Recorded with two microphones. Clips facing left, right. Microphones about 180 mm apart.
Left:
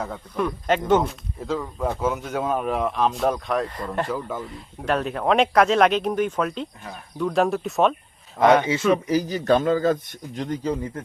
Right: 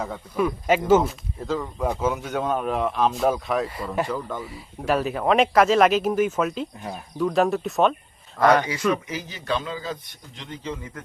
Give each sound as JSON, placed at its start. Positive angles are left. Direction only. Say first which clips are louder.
{"t": 0.0, "sound": "speech", "louder": "right 1 dB", "side_deg": -5}
{"t": 8.4, "sound": "speech", "louder": "left 1 dB", "side_deg": 20}
{"t": 9.0, "sound": "a man's voice", "louder": "left 9 dB", "side_deg": 40}